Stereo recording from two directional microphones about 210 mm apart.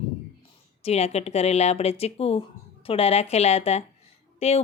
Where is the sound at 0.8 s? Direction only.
30° left (ahead or behind).